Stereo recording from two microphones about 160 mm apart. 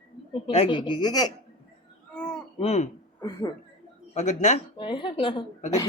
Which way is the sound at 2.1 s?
5° left (ahead or behind).